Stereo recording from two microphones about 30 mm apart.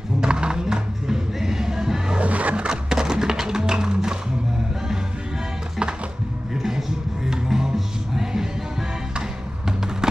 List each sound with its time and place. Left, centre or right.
0.2 s music: right
2.1 s a sound: right
2.7 s music: right
6.5 s music: centre